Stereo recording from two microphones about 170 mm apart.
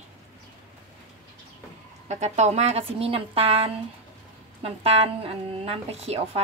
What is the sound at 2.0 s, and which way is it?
Speech, 45° right (ahead or behind).